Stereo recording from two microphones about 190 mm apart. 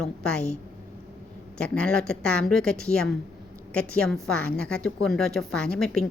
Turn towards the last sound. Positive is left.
turn(degrees=5)  # may be behind; listen again after turning